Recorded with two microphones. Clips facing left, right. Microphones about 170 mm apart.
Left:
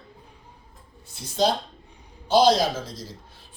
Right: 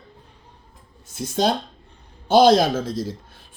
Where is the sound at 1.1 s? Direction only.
50° right (ahead or behind).